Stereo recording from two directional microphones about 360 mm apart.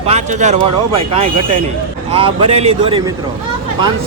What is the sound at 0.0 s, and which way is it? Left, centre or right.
Speech, centre.